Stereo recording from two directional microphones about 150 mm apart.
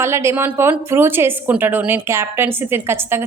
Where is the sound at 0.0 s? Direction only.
20° right (ahead or behind).